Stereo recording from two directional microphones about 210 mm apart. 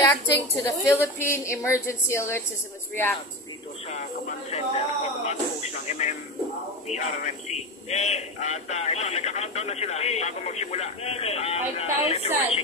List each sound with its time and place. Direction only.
0.8 s a woman's voice: 15° left (ahead or behind)
4.5 s a man's voice: 30° left (ahead or behind)